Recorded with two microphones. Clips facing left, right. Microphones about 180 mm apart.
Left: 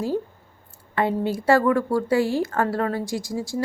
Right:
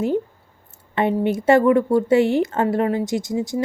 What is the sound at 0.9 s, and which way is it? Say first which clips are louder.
Speech: right 3 dB; 20° right (ahead or behind).